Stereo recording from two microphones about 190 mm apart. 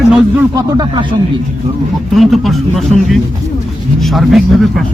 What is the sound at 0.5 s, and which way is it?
Speech, 20° right (ahead or behind).